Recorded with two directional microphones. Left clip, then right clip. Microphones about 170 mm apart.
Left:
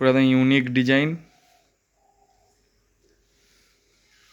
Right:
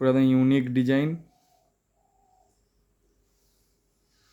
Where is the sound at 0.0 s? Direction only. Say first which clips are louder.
Left 3 dB; 5° right (ahead or behind).